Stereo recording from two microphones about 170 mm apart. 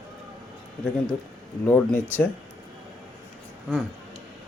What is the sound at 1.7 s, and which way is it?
Speech, 10° left (ahead or behind).